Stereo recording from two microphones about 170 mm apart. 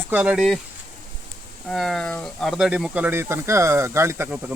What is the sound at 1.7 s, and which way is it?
Speech, centre (ahead or behind).